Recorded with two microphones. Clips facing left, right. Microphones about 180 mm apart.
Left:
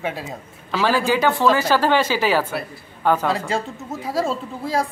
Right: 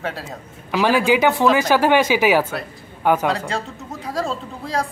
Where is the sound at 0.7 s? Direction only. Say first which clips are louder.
Right 3 dB; 15° right (ahead or behind).